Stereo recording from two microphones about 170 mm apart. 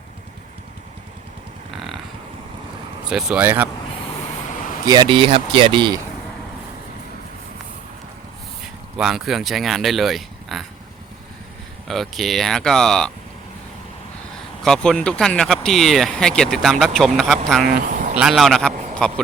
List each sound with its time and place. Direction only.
3.1 s speech: 5° right (ahead or behind)
4.9 s speech: 30° right (ahead or behind)
9.0 s speech: centre (ahead or behind)
11.9 s speech: centre (ahead or behind)
14.6 s speech: 5° left (ahead or behind)
18.9 s a sound: 5° left (ahead or behind)